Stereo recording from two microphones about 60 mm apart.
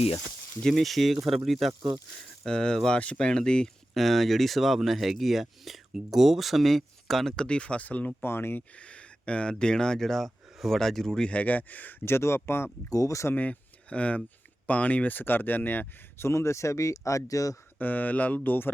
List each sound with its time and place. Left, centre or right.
0.6 s speech: centre
2.4 s speech: centre
8.2 s speech: left
8.7 s speech: left
11.3 s speech: left
12.0 s speech: left
12.9 s speech: left
13.3 s speech: left
16.2 s speech: left
17.7 s speech: left